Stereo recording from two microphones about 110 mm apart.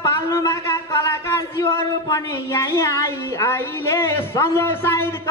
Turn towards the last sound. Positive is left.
turn(degrees=25)  # may be behind; listen again after turning